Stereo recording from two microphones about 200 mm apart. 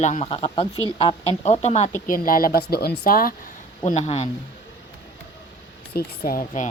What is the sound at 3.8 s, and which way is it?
Speech, 35° left (ahead or behind).